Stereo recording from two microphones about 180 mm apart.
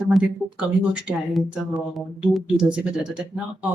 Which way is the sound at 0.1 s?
5° right (ahead or behind).